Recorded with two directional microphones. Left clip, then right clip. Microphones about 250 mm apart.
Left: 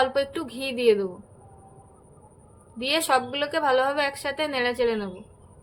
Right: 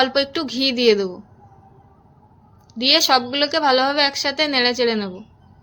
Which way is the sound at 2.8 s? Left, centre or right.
Right.